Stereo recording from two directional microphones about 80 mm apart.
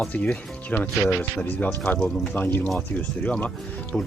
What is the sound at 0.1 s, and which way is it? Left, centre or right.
Speech, centre.